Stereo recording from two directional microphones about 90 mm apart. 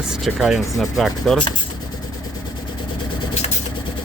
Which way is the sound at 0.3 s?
5° right (ahead or behind).